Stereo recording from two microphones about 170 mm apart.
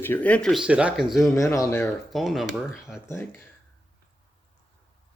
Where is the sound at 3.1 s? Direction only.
15° left (ahead or behind).